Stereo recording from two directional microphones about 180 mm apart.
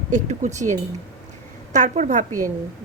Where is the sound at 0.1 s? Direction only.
45° right (ahead or behind).